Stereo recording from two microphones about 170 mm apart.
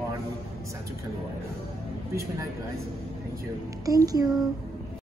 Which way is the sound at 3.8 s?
20° right (ahead or behind).